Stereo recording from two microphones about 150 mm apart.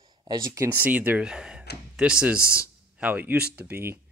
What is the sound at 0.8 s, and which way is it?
Speech, 10° right (ahead or behind).